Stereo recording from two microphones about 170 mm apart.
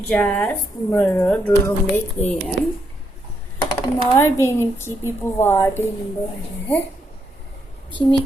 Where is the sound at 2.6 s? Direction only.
90° left.